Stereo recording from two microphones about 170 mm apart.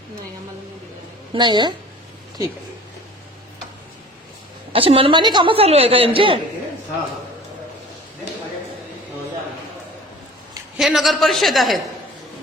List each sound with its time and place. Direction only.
1.3 s a woman's voice: 25° right (ahead or behind)
4.7 s a woman's voice: 35° right (ahead or behind)
10.8 s a woman's voice: centre (ahead or behind)